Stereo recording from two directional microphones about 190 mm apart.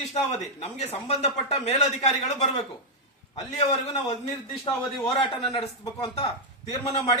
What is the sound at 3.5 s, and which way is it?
Speech, 35° left (ahead or behind).